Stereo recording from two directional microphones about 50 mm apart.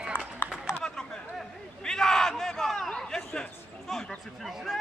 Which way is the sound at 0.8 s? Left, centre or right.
Centre.